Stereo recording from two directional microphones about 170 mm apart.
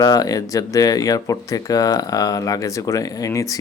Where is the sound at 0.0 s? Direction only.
20° left (ahead or behind).